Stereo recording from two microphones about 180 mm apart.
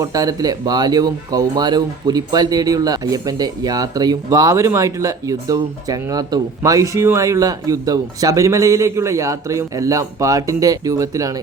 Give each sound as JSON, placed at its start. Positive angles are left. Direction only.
{"t": 0.0, "sound": "speech", "side_deg": -20}